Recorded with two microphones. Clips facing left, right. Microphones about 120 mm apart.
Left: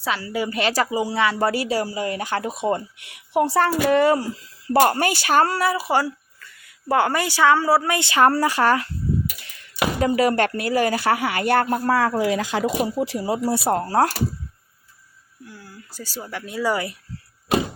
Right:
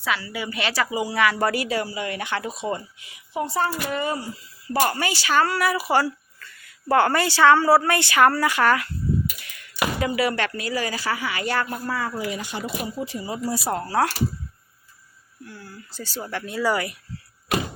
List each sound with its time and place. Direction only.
0.0 s speech: 35° left (ahead or behind)
0.9 s speech: 25° left (ahead or behind); by 4.3 s 90° left
4.8 s speech: 50° left (ahead or behind); by 8.9 s 30° left (ahead or behind)
10.0 s speech: 40° left (ahead or behind)
11.9 s speech: 80° left
13.0 s speech: 75° left (ahead or behind)
13.7 s speech: 45° left (ahead or behind)
15.4 s speech: 10° left (ahead or behind)